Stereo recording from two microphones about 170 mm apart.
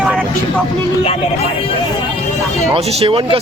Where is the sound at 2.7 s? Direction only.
35° right (ahead or behind).